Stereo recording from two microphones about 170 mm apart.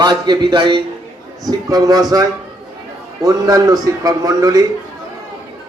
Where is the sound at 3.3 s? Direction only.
20° right (ahead or behind).